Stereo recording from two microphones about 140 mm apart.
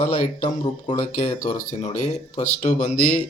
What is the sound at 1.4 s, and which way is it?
Speech, 60° left (ahead or behind).